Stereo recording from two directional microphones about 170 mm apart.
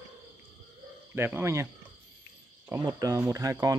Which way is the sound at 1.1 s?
10° right (ahead or behind).